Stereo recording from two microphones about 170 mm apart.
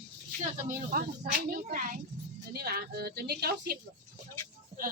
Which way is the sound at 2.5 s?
65° right (ahead or behind).